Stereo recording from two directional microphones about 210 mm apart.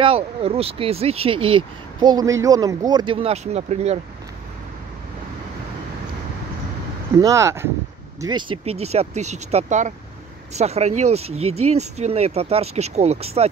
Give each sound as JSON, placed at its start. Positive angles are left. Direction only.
{"t": 0.0, "sound": "speech", "side_deg": -25}
{"t": 7.2, "sound": "speech", "side_deg": -15}